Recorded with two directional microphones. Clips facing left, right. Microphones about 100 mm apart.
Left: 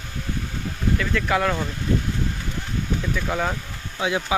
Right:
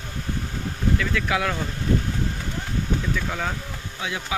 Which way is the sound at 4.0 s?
25° left (ahead or behind).